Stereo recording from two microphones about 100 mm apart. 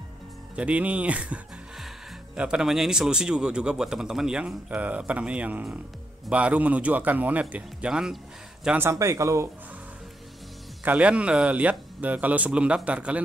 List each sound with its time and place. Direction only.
0.6 s speech: 10° right (ahead or behind)
8.7 s speech: 25° right (ahead or behind)
10.8 s speech: 15° right (ahead or behind)